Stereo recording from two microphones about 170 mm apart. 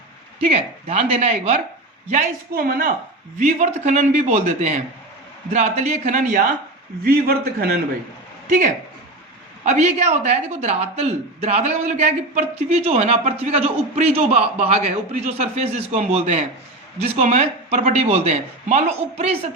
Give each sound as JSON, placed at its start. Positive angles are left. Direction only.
{"t": 0.3, "sound": "a woman's voice", "side_deg": -35}
{"t": 2.6, "sound": "a man's voice", "side_deg": -60}
{"t": 3.3, "sound": "a man's voice", "side_deg": -45}
{"t": 7.0, "sound": "a man's voice", "side_deg": -65}
{"t": 8.4, "sound": "a man's voice", "side_deg": -50}